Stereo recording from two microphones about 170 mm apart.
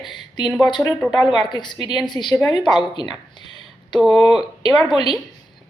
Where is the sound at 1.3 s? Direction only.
25° left (ahead or behind).